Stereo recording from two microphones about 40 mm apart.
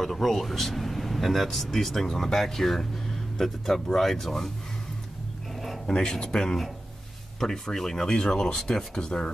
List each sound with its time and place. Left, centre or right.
0.0 s speech: centre
5.9 s speech: centre